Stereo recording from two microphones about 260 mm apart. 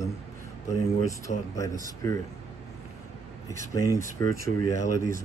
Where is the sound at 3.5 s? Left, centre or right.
Centre.